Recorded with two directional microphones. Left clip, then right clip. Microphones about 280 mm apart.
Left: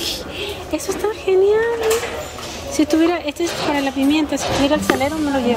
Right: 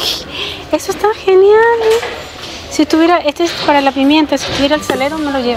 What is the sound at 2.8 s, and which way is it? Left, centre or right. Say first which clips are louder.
Speech: right 7 dB; centre.